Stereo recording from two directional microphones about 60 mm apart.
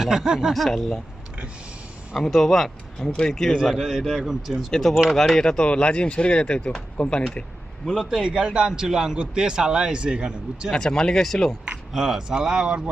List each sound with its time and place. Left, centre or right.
0.0 s a man's voice: centre
0.5 s a man's voice: centre
2.1 s a man's voice: centre
4.7 s a man's voice: centre
8.1 s a man's voice: centre
10.7 s speech: centre
11.9 s a man's voice: centre